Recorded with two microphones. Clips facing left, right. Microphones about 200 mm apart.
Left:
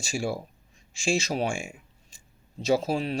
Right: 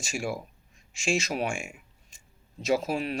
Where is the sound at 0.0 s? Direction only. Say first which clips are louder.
Left 2 dB; 30° left (ahead or behind).